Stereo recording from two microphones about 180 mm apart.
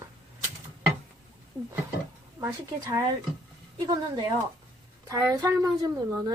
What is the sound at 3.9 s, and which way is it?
A woman's voice, 20° right (ahead or behind).